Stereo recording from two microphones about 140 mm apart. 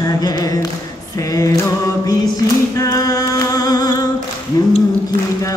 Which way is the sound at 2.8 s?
25° left (ahead or behind).